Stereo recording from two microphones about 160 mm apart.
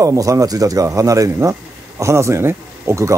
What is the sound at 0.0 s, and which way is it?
Speech, 20° right (ahead or behind).